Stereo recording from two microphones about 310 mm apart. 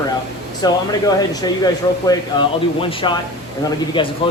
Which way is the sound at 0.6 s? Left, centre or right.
Centre.